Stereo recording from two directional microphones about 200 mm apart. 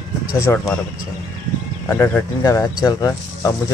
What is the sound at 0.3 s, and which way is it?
Speech, 15° left (ahead or behind).